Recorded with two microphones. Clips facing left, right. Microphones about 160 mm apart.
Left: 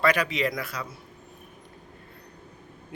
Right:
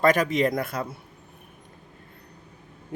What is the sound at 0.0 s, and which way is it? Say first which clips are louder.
Speech: right 4 dB; 45° right (ahead or behind).